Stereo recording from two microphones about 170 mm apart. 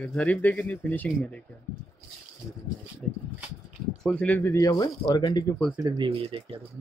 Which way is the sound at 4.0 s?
5° left (ahead or behind).